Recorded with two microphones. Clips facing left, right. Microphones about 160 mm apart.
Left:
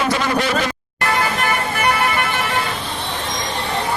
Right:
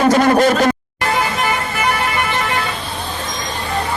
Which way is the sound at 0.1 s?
45° right (ahead or behind).